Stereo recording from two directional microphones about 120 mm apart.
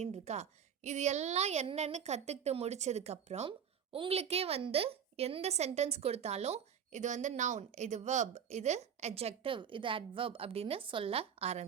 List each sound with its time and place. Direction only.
0.0 s a woman's voice: 65° right (ahead or behind)
3.9 s a woman's voice: 50° right (ahead or behind)